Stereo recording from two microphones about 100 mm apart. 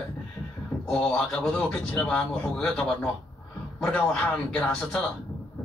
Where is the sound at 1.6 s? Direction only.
20° left (ahead or behind).